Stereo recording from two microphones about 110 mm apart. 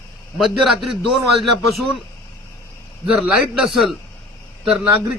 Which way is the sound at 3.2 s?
5° right (ahead or behind).